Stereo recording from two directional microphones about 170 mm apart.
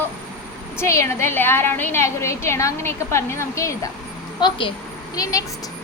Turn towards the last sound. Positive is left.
turn(degrees=20)  # may be behind; listen again after turning